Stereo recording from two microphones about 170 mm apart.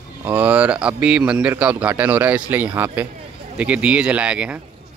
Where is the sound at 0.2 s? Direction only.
10° right (ahead or behind).